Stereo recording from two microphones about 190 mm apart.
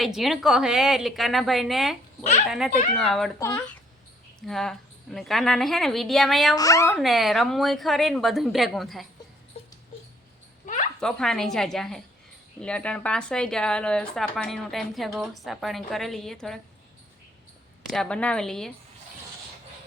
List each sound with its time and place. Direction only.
0.0 s speech: centre (ahead or behind)
3.3 s speech: 15° left (ahead or behind)
4.4 s speech: centre (ahead or behind)
6.6 s speech: 15° left (ahead or behind)
6.9 s speech: centre (ahead or behind)
11.0 s speech: 5° left (ahead or behind)
17.9 s speech: 5° left (ahead or behind)